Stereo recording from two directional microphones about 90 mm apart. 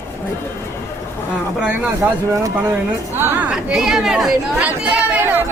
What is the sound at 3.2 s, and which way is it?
Speech, 20° right (ahead or behind).